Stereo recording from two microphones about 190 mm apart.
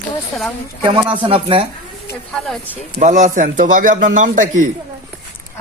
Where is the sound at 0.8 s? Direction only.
25° right (ahead or behind).